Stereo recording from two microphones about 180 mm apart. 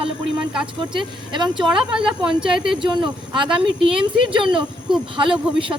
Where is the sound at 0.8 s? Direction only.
25° right (ahead or behind).